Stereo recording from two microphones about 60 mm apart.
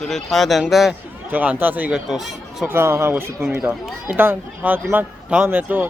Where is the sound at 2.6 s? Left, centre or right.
Right.